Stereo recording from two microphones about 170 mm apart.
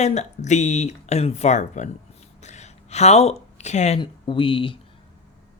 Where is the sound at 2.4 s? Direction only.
40° left (ahead or behind).